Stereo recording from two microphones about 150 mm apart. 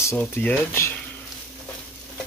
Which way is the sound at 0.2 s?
10° left (ahead or behind).